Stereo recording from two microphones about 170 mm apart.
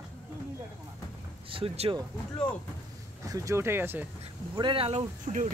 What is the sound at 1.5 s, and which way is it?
Speech, 35° right (ahead or behind).